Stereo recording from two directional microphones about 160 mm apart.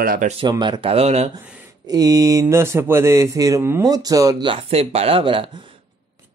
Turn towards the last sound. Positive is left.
turn(degrees=-35)  # may be behind; listen again after turning